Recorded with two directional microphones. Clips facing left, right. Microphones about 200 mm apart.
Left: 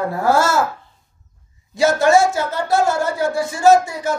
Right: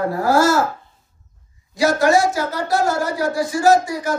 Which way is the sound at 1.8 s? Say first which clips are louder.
Left 2 dB; 25° left (ahead or behind).